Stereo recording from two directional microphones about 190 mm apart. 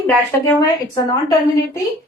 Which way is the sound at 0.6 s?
20° left (ahead or behind).